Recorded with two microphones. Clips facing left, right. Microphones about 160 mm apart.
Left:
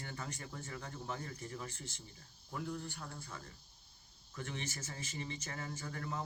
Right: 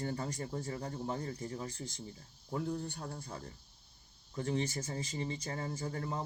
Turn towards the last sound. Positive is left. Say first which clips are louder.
# right 4 dB
turn(degrees=-30)  # may be behind; listen again after turning